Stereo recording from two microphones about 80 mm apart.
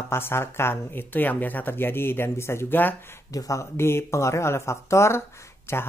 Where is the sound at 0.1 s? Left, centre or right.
Left.